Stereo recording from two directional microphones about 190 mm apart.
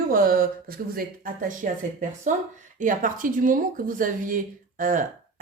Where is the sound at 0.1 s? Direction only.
45° right (ahead or behind).